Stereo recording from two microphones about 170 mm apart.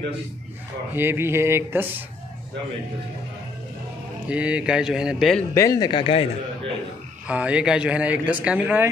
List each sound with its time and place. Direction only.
0.9 s speech: 15° right (ahead or behind)
4.3 s speech: 5° right (ahead or behind)
5.5 s speech: 20° left (ahead or behind)
7.2 s speech: 5° right (ahead or behind)